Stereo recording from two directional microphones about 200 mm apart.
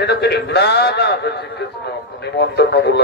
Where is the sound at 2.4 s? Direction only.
55° left (ahead or behind).